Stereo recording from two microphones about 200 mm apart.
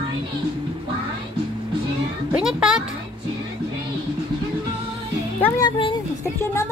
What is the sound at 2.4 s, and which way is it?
Speech, 5° right (ahead or behind).